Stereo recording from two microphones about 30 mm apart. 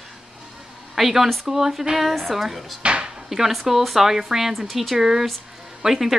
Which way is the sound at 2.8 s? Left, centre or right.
Right.